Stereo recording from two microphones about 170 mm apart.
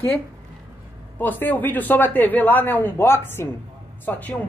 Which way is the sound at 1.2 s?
10° left (ahead or behind).